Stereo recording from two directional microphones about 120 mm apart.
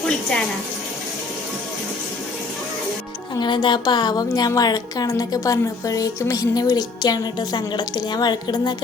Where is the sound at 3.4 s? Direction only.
40° left (ahead or behind).